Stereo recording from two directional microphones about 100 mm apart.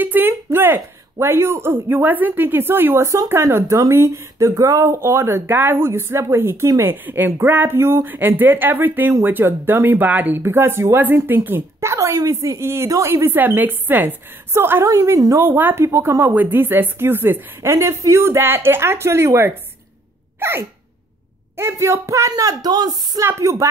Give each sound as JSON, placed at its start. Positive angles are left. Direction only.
{"t": 0.0, "sound": "a sound", "side_deg": -20}
{"t": 1.2, "sound": "a woman's voice", "side_deg": -25}
{"t": 15.4, "sound": "a woman's voice", "side_deg": -20}
{"t": 20.3, "sound": "sneeze", "side_deg": -20}
{"t": 21.5, "sound": "a woman's voice", "side_deg": -25}
{"t": 22.3, "sound": "speech", "side_deg": -40}
{"t": 23.2, "sound": "a woman's voice", "side_deg": -30}